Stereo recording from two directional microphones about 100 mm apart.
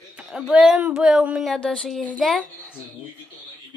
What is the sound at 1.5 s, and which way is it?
Speech, 10° left (ahead or behind).